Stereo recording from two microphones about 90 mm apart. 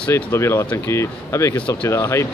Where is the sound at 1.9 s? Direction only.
30° left (ahead or behind).